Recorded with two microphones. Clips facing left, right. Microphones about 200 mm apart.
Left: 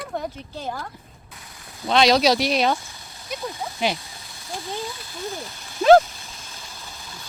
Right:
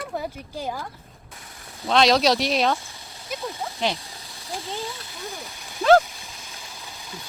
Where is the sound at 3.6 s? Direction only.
5° left (ahead or behind).